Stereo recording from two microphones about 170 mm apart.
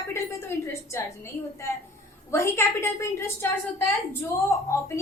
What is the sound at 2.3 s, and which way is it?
A woman's voice, 15° left (ahead or behind).